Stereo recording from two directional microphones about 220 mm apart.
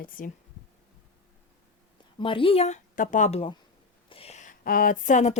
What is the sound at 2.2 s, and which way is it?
Speech, 25° left (ahead or behind).